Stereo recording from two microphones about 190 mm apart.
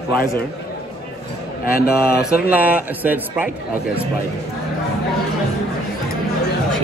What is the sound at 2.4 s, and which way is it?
A man's voice, 10° right (ahead or behind).